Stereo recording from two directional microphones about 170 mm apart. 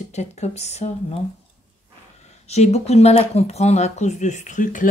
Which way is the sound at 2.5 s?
40° left (ahead or behind).